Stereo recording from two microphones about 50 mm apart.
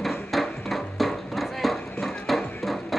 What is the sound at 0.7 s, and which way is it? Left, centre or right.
Horse, centre.